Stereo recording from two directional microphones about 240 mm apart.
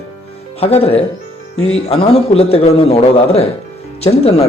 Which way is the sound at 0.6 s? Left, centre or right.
Left.